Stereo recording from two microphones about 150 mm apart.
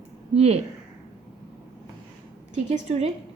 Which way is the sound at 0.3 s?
45° right (ahead or behind).